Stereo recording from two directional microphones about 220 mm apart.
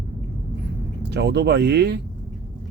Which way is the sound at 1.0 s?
50° right (ahead or behind).